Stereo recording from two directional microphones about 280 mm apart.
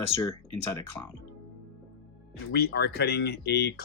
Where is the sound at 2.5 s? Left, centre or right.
Left.